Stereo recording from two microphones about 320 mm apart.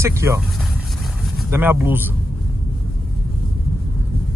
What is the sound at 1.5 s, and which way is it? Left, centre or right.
Speech, centre.